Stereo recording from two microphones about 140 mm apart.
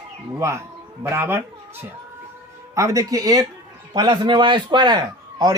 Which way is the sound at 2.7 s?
25° right (ahead or behind).